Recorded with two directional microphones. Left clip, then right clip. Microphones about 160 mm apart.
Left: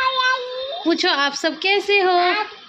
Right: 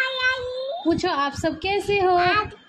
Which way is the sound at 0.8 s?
5° right (ahead or behind).